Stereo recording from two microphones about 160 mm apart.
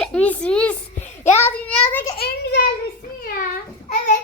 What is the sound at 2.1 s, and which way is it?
Speech, 80° left.